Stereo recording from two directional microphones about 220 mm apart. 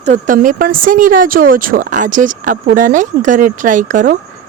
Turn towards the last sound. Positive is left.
turn(degrees=-35)  # may be behind; listen again after turning